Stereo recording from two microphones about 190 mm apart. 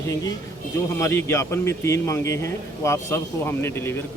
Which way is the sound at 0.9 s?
15° left (ahead or behind).